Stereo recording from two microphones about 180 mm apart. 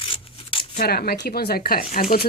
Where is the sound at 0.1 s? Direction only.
30° left (ahead or behind).